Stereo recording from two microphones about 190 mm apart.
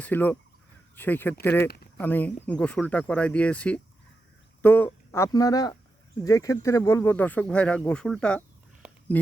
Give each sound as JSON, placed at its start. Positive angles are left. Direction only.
{"t": 0.0, "sound": "speech", "side_deg": 10}